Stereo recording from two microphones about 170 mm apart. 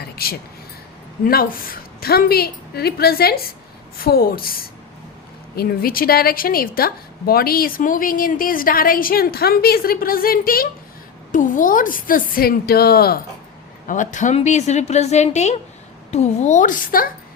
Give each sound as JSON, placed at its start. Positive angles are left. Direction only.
{"t": 0.0, "sound": "a sound", "side_deg": 65}
{"t": 1.2, "sound": "a woman's voice", "side_deg": 60}
{"t": 13.8, "sound": "a woman's voice", "side_deg": 50}